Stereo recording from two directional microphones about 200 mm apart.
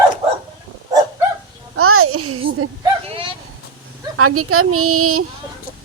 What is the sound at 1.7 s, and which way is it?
Speech, 90° right.